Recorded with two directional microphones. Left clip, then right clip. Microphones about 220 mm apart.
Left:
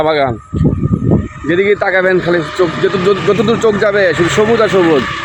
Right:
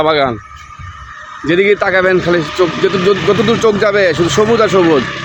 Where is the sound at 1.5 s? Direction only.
5° right (ahead or behind).